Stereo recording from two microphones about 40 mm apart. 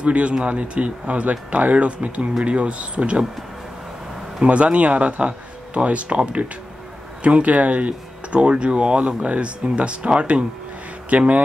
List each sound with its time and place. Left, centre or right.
0.0 s speech: right
4.5 s speech: right